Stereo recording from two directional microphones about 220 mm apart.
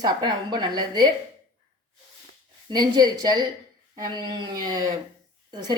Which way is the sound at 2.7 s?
20° right (ahead or behind).